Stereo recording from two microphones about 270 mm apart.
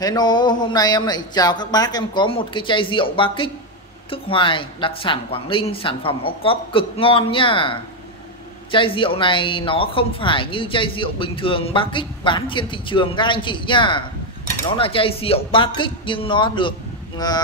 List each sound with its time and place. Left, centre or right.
0.0 s speech: centre